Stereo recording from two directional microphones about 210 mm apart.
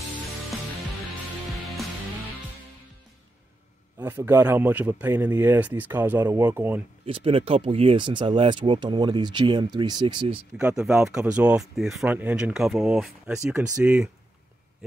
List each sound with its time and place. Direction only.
4.0 s speech: 10° right (ahead or behind)
7.1 s speech: 25° right (ahead or behind)
10.6 s speech: 5° right (ahead or behind)